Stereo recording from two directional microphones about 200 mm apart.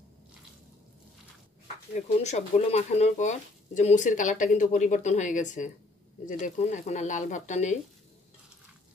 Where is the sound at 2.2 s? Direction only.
35° left (ahead or behind).